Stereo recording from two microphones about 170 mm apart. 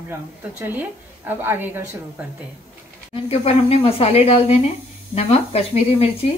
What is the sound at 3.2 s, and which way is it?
Speech, 35° left (ahead or behind).